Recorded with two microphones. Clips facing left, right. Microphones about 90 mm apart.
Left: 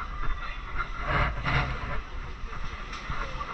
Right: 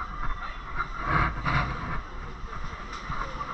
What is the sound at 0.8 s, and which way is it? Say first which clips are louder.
Vehicle: right 3 dB; 15° right (ahead or behind).